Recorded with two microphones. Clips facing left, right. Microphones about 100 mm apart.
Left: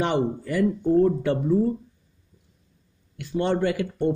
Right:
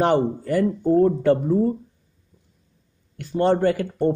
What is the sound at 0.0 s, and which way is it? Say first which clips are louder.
Speech: right 4 dB; 45° right (ahead or behind).